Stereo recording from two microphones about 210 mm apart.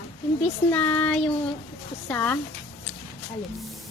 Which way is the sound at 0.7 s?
5° left (ahead or behind).